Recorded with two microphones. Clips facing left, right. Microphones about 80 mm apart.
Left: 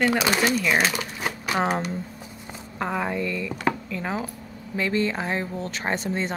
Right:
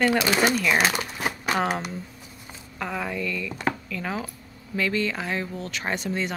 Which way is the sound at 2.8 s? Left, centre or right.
Left.